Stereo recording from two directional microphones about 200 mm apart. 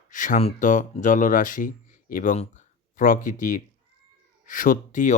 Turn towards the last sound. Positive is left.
turn(degrees=40)  # may be behind; listen again after turning